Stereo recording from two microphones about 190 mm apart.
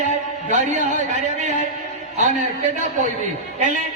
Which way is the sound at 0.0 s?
40° right (ahead or behind).